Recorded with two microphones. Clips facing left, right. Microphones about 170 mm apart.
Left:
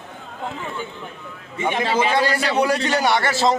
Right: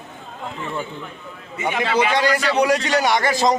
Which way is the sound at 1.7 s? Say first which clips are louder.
Right 1 dB; 30° left (ahead or behind).